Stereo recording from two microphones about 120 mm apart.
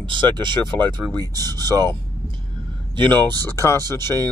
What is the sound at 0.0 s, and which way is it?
Speech, 40° right (ahead or behind).